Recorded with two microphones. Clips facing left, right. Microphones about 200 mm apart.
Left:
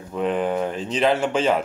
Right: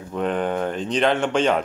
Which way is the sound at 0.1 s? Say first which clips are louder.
Left 1 dB; centre (ahead or behind).